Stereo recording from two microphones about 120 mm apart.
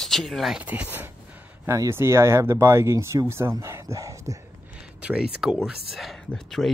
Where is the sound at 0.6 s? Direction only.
15° right (ahead or behind).